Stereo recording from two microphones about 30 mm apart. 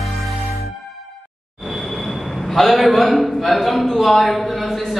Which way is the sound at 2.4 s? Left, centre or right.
Centre.